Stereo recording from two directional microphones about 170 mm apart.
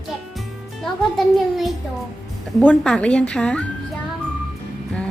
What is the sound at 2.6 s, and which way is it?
Speech, 5° left (ahead or behind).